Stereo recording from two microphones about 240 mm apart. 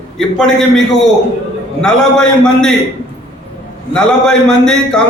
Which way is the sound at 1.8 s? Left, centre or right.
Centre.